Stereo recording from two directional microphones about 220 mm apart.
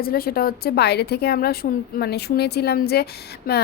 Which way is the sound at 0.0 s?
45° left (ahead or behind).